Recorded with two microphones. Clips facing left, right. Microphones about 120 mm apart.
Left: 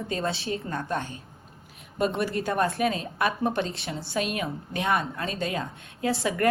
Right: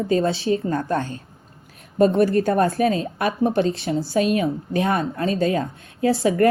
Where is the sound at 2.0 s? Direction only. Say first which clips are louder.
Right 10 dB; 45° right (ahead or behind).